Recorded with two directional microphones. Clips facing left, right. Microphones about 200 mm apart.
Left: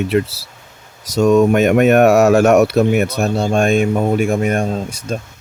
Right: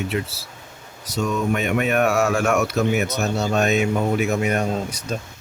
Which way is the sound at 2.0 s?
40° left (ahead or behind).